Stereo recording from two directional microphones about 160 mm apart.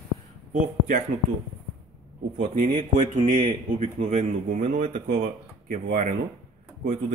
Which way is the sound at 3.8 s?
40° right (ahead or behind).